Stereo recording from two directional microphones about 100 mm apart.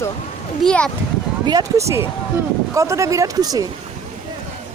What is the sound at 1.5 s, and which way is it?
Speech, 35° right (ahead or behind).